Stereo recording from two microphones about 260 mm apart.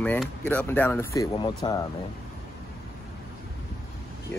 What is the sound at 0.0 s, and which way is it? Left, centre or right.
Speech, centre.